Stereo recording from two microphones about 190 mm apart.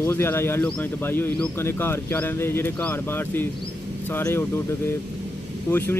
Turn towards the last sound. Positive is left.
turn(degrees=10)  # may be behind; listen again after turning